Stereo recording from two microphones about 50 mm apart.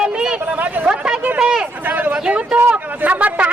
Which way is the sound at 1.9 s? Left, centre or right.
Right.